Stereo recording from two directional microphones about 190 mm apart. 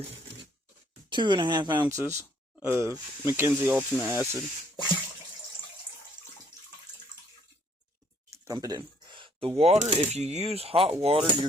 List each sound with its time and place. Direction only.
1.1 s speech: 25° right (ahead or behind)
8.3 s a sound: 20° right (ahead or behind)
9.6 s speech: 35° right (ahead or behind)